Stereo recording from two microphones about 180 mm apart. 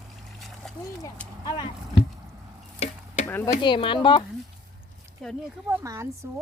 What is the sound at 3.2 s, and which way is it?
Speech, 15° left (ahead or behind).